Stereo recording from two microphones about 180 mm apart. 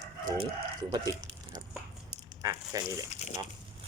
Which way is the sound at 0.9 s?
20° right (ahead or behind).